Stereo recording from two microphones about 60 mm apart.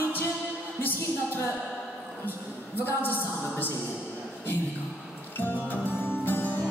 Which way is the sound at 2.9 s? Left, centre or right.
Left.